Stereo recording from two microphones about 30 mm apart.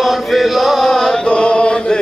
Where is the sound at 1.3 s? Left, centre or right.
Left.